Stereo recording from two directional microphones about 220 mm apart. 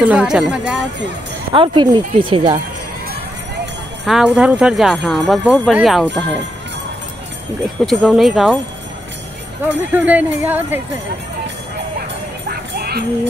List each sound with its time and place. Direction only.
0.0 s speech: 5° right (ahead or behind)
1.5 s speech: 20° right (ahead or behind)
4.0 s speech: centre (ahead or behind)
7.8 s speech: centre (ahead or behind)
9.8 s speech: 10° right (ahead or behind)
12.4 s music: 45° right (ahead or behind)